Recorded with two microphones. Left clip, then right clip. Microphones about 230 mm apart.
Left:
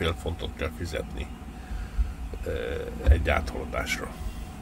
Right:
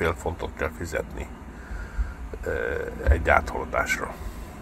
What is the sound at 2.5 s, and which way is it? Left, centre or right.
Speech, left.